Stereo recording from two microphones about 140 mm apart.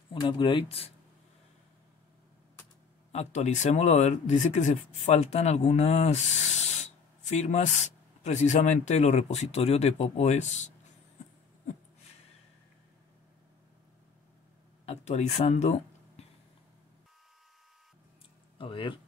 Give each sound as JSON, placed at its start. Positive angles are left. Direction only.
{"t": 0.1, "sound": "speech", "side_deg": 35}
{"t": 3.1, "sound": "speech", "side_deg": 55}
{"t": 14.9, "sound": "speech", "side_deg": 50}
{"t": 18.6, "sound": "speech", "side_deg": 35}